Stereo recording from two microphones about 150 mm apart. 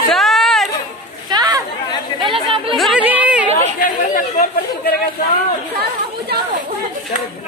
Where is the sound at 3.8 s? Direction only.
65° left (ahead or behind).